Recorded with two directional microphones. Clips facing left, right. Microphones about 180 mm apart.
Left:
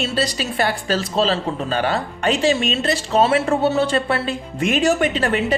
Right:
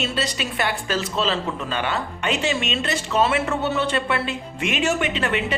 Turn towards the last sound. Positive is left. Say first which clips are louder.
# left 4 dB
turn(degrees=40)  # may be behind; listen again after turning